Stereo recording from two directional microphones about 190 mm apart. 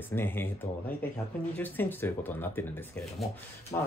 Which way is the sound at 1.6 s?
10° left (ahead or behind).